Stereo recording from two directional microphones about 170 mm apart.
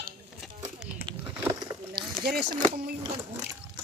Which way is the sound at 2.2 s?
65° right (ahead or behind).